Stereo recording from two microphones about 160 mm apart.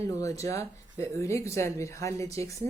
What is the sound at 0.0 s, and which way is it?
Speech, 20° left (ahead or behind).